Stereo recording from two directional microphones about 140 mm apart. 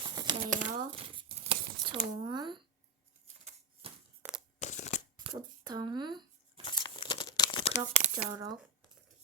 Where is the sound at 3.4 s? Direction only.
45° right (ahead or behind).